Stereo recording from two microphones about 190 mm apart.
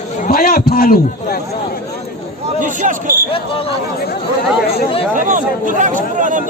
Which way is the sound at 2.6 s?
45° right (ahead or behind).